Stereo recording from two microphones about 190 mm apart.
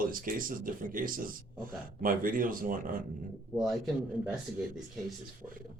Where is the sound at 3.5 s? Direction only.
Centre (ahead or behind).